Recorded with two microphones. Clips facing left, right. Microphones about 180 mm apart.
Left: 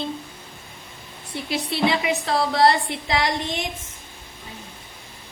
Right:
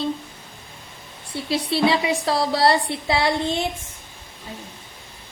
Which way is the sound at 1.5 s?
30° right (ahead or behind).